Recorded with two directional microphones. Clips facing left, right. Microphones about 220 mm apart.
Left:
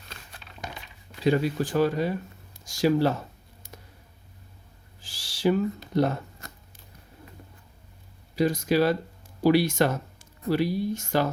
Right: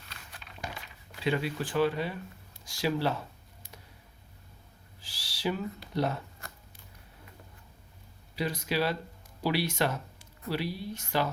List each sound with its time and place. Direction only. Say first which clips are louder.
1.2 s speech: left 7 dB; 40° left (ahead or behind)
4.9 s owl: left 4 dB; 45° left (ahead or behind)
5.9 s speech: left 6 dB; 45° left (ahead or behind)
8.4 s speech: left 8 dB; 45° left (ahead or behind)